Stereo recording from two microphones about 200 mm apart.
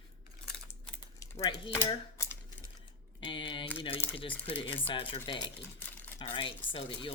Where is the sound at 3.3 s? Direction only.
25° left (ahead or behind).